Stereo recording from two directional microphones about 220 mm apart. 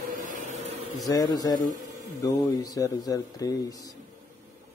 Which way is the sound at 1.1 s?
20° left (ahead or behind).